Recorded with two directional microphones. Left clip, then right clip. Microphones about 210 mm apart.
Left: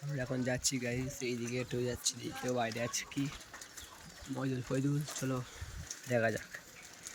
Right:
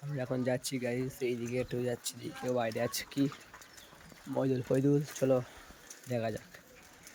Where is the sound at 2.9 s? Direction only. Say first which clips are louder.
Right 2 dB; 25° right (ahead or behind).